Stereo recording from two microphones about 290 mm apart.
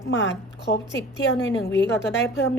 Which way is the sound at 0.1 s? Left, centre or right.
Left.